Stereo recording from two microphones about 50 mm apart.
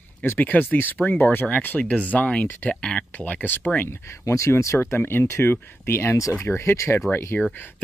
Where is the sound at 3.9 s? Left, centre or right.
Left.